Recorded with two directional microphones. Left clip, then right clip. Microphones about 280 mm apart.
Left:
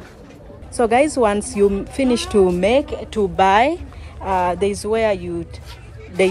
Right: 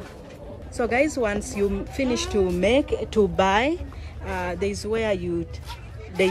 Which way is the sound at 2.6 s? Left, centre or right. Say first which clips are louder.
Left 4 dB; centre.